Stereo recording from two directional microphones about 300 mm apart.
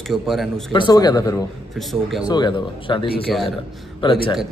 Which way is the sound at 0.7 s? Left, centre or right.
Centre.